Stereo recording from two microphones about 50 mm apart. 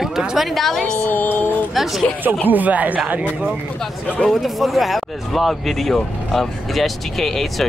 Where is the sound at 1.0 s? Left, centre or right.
Left.